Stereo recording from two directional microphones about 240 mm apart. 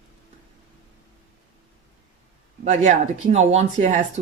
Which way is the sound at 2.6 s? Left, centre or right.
Right.